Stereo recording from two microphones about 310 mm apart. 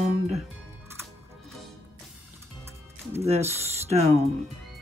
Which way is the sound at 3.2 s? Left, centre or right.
Centre.